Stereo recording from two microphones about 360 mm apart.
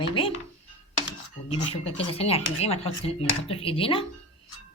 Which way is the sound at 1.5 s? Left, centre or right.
Centre.